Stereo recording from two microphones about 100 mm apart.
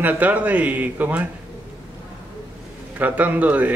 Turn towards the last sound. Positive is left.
turn(degrees=-15)  # may be behind; listen again after turning